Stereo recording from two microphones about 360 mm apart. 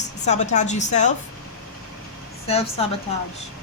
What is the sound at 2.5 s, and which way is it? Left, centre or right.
Speech, centre.